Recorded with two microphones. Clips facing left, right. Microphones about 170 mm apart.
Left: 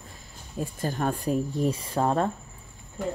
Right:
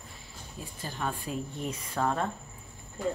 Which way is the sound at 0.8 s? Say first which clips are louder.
Left 6 dB; 45° left (ahead or behind).